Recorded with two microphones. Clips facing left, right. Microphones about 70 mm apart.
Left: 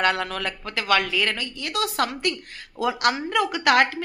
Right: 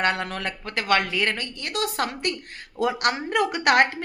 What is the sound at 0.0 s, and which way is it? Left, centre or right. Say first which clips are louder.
Speech: left 1 dB; right.